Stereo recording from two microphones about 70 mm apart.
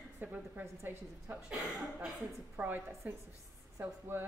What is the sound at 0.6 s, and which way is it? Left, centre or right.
Speech, right.